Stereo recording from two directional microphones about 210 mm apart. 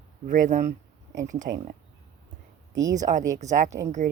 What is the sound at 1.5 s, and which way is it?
Speech, 50° right (ahead or behind).